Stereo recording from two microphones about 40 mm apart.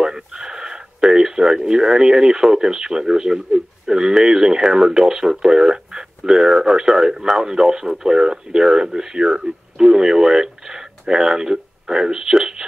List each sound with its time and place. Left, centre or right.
0.0 s speech: centre